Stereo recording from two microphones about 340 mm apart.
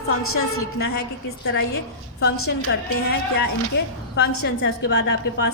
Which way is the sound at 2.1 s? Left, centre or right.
Left.